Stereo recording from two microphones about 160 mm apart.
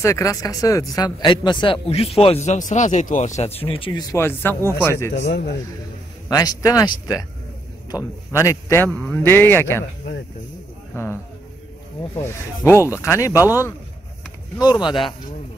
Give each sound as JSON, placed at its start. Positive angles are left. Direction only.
{"t": 0.0, "sound": "speech", "side_deg": 20}
{"t": 5.3, "sound": "a man's voice", "side_deg": 90}
{"t": 6.2, "sound": "a man's voice", "side_deg": 20}
{"t": 10.9, "sound": "a man's voice", "side_deg": 20}
{"t": 12.7, "sound": "speech", "side_deg": -15}
{"t": 13.0, "sound": "speech", "side_deg": 20}
{"t": 14.6, "sound": "speech", "side_deg": 30}